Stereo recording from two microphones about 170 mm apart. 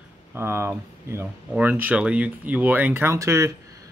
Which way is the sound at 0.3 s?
15° right (ahead or behind).